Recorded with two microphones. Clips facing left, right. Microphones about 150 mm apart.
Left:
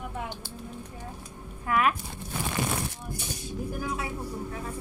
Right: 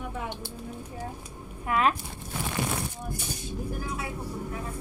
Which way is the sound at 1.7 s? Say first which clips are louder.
Even; 25° right (ahead or behind).